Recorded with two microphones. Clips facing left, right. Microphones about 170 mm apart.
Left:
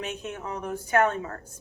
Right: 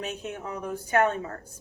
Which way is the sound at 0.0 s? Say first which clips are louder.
Even; 45° right (ahead or behind).